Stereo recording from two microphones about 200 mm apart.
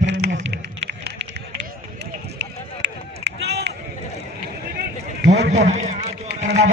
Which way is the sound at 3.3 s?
60° right (ahead or behind).